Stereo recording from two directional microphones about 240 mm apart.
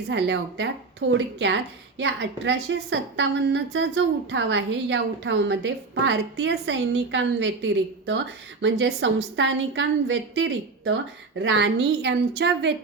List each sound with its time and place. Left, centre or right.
0.1 s a woman's voice: right